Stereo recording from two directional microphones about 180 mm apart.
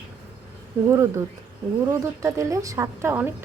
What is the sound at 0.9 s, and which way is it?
A woman's voice, 15° right (ahead or behind).